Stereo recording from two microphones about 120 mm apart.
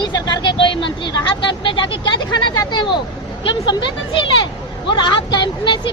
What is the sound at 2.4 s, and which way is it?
Speech, 35° left (ahead or behind).